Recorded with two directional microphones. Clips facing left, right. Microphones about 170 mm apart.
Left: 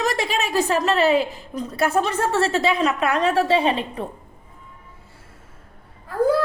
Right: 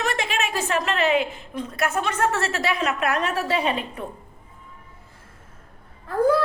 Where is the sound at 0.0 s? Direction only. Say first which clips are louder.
Left 3 dB; 35° left (ahead or behind).